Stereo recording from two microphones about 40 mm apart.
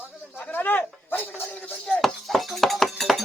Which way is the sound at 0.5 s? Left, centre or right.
Left.